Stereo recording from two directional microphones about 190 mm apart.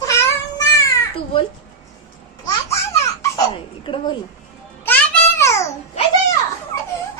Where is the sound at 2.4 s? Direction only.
15° left (ahead or behind).